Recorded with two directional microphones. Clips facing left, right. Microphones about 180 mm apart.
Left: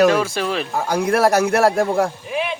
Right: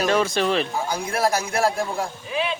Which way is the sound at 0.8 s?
65° left (ahead or behind).